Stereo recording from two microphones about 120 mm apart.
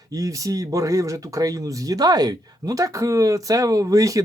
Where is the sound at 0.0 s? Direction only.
30° right (ahead or behind).